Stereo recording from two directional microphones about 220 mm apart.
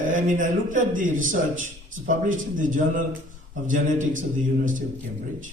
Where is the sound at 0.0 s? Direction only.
35° right (ahead or behind).